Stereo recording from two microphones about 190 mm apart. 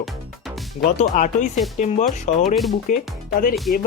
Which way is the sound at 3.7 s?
50° left (ahead or behind).